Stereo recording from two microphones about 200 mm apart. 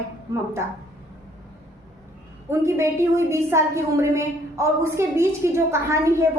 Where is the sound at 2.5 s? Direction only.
15° right (ahead or behind).